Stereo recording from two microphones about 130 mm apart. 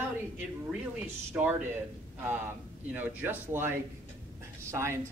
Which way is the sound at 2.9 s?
10° right (ahead or behind).